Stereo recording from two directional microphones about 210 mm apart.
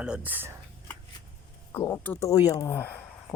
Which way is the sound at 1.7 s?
10° left (ahead or behind).